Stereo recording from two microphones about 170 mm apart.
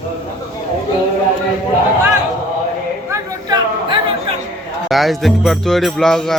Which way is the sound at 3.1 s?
20° right (ahead or behind).